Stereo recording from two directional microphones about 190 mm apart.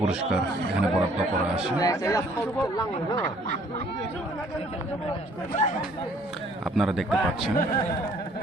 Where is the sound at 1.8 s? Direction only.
15° left (ahead or behind).